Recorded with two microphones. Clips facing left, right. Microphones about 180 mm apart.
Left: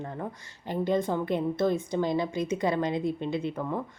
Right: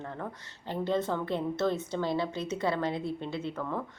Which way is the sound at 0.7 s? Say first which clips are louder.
Left 3 dB; 15° left (ahead or behind).